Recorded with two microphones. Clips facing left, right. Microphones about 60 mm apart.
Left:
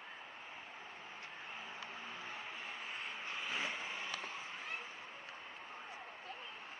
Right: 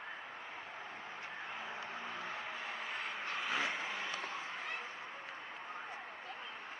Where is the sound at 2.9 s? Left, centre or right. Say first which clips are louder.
Right 4 dB; right.